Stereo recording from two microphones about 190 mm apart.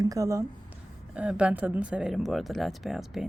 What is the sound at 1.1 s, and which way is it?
Speech, 5° right (ahead or behind).